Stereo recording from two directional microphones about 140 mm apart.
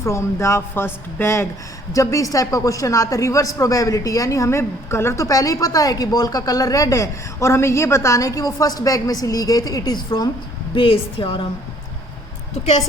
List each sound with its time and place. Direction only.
0.0 s speech: 20° left (ahead or behind)
10.8 s a woman's voice: 40° left (ahead or behind)